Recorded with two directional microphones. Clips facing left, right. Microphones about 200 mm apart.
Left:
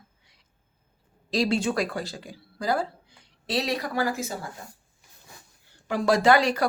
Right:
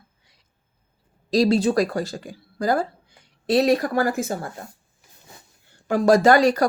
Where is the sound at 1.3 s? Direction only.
40° right (ahead or behind).